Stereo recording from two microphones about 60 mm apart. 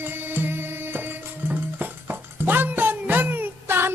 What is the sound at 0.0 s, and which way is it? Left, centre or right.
Music, right.